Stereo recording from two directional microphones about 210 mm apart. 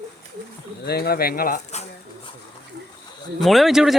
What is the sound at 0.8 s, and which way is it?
Speech, 45° left (ahead or behind).